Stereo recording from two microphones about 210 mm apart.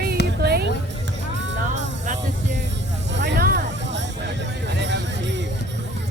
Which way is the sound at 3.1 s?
55° right (ahead or behind).